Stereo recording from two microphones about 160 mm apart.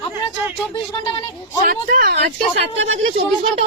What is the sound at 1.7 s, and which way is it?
Speech, 60° right (ahead or behind).